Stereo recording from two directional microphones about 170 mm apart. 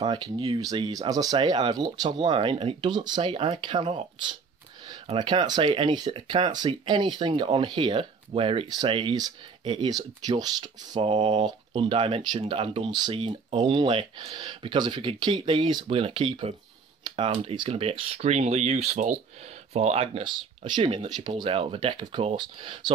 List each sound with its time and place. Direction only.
0.0 s speech: 25° right (ahead or behind)